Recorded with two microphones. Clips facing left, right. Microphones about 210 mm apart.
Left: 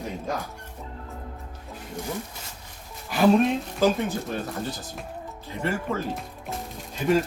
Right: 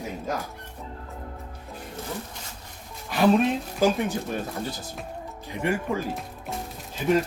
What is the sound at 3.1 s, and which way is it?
Speech, centre (ahead or behind).